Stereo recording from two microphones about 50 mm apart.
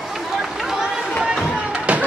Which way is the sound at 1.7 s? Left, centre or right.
Right.